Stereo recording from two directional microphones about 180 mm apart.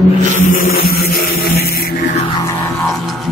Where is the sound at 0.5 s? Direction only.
55° left (ahead or behind).